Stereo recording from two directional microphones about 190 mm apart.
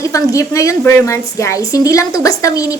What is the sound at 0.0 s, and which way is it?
A woman's voice, 15° left (ahead or behind).